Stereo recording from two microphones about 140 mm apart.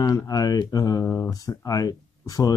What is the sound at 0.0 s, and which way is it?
Speech, 25° left (ahead or behind).